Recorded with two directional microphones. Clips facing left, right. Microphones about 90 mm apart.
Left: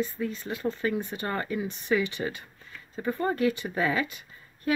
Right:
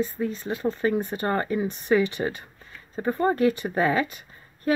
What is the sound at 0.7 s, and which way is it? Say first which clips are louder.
Speech: right 5 dB; 40° right (ahead or behind).